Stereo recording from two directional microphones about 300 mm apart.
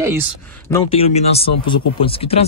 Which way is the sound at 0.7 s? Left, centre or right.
Centre.